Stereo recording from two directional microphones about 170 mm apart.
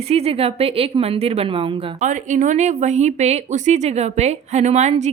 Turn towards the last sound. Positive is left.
turn(degrees=-40)  # may be behind; listen again after turning